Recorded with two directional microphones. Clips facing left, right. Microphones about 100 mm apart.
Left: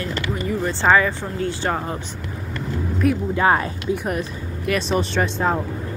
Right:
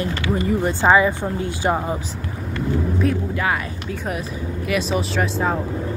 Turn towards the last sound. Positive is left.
turn(degrees=0)  # may be behind; listen again after turning